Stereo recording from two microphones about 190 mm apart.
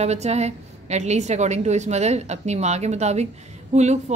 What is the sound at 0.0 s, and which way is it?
A woman's voice, 35° right (ahead or behind).